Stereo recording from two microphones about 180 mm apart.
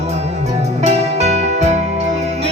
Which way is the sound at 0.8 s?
35° right (ahead or behind).